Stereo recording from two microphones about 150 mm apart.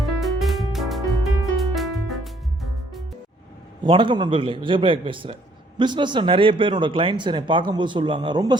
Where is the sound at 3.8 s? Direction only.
35° right (ahead or behind).